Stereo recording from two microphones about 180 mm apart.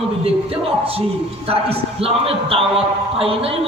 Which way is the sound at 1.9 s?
30° right (ahead or behind).